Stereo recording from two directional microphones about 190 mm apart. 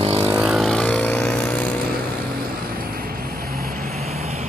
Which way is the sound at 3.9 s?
35° right (ahead or behind).